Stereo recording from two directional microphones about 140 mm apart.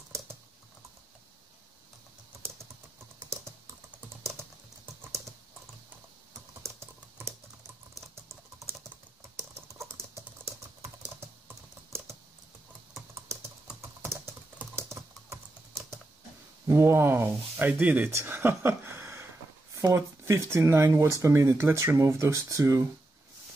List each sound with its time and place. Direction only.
6.6 s typing: 20° right (ahead or behind)
11.1 s typing: 15° right (ahead or behind)
13.7 s typing: 20° right (ahead or behind)
16.6 s speech: 15° right (ahead or behind)
19.7 s a sound: 25° right (ahead or behind)
20.2 s speech: 20° right (ahead or behind)